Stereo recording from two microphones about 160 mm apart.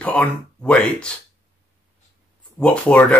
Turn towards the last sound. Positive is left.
turn(degrees=10)  # may be behind; listen again after turning